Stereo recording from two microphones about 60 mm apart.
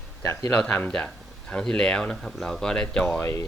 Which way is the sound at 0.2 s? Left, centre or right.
Left.